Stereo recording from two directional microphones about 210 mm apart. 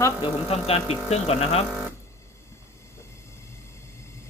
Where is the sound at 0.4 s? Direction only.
30° left (ahead or behind).